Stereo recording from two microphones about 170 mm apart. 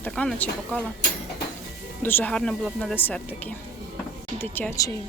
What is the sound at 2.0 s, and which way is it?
Speech, 10° left (ahead or behind).